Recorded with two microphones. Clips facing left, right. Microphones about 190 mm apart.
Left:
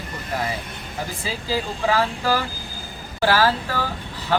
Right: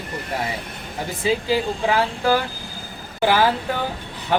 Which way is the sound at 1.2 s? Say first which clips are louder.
Right 7 dB; 20° right (ahead or behind).